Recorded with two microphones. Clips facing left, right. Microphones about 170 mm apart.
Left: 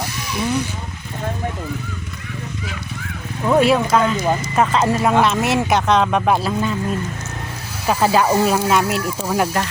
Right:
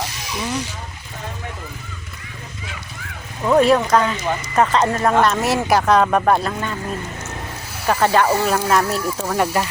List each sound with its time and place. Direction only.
0.2 s speech: 55° left (ahead or behind)
3.4 s speech: 5° left (ahead or behind)
6.2 s speech: 5° left (ahead or behind)
7.9 s speech: 5° left (ahead or behind)